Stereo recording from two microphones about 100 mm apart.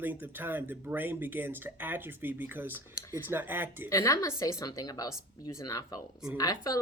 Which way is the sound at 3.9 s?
35° left (ahead or behind).